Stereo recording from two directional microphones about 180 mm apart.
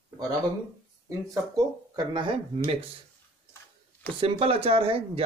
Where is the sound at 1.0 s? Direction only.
20° right (ahead or behind).